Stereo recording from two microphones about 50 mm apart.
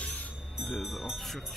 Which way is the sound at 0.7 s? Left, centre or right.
Centre.